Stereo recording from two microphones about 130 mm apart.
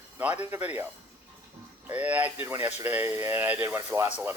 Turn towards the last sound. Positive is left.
turn(degrees=-20)  # may be behind; listen again after turning